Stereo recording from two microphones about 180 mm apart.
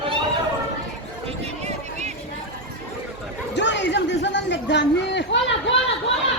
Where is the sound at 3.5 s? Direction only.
80° left.